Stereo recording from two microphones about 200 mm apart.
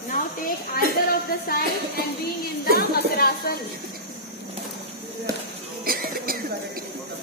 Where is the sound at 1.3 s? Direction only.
45° left (ahead or behind).